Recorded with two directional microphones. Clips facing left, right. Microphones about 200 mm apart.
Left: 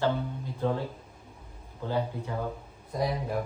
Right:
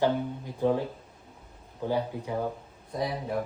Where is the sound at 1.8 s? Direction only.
15° right (ahead or behind).